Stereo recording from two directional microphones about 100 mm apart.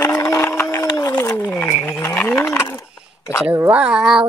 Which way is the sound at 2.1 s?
10° left (ahead or behind).